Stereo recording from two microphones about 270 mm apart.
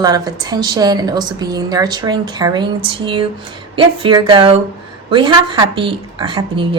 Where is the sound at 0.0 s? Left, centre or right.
Centre.